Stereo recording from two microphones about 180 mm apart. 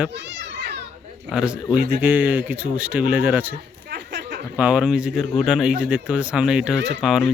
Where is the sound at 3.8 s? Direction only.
70° right (ahead or behind).